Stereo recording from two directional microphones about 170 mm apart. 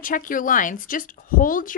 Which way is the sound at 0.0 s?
55° left (ahead or behind).